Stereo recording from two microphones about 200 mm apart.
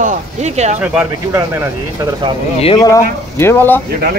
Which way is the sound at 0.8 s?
10° right (ahead or behind).